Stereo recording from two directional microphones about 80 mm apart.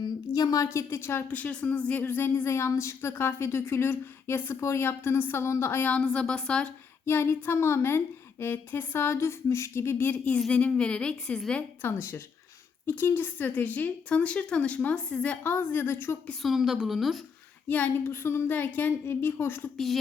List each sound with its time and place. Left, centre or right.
0.0 s a woman's voice: left
1.3 s speech: centre
5.9 s a woman's voice: centre
7.0 s a woman's voice: left; by 11.6 s centre
11.8 s a woman's voice: left
16.4 s a woman's voice: centre
17.7 s speech: left
19.7 s a woman's voice: centre